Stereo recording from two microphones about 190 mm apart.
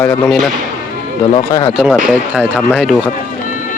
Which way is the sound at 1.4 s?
20° left (ahead or behind).